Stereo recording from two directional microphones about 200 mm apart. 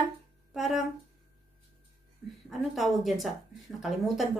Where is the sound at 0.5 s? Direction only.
Centre (ahead or behind).